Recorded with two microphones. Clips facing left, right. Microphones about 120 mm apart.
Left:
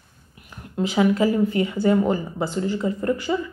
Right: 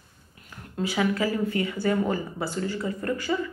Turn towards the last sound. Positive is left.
turn(degrees=20)  # may be behind; listen again after turning